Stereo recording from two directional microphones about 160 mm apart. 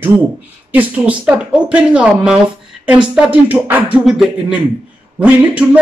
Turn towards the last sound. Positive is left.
turn(degrees=-10)  # may be behind; listen again after turning